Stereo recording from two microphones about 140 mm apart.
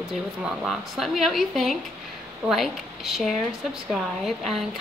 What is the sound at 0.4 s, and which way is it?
Speech, 5° right (ahead or behind).